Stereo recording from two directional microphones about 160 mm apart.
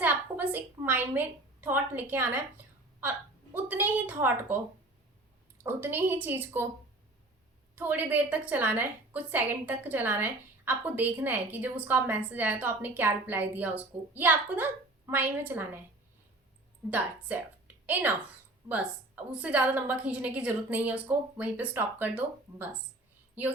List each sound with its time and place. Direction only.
0.0 s a sound: 10° right (ahead or behind)
3.0 s a woman's voice: 10° right (ahead or behind)
5.6 s a woman's voice: 15° right (ahead or behind)
7.8 s a woman's voice: 10° right (ahead or behind)
16.9 s a woman's voice: 10° right (ahead or behind)